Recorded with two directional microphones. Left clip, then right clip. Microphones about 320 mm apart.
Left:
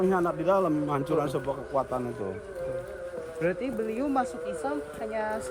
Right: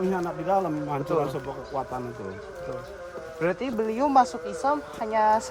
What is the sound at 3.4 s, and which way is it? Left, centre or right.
A man's voice, centre.